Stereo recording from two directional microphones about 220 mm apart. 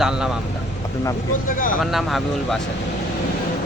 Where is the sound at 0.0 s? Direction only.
5° right (ahead or behind).